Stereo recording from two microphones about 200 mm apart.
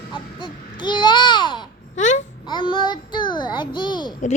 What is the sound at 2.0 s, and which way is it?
Babbling, 35° left (ahead or behind).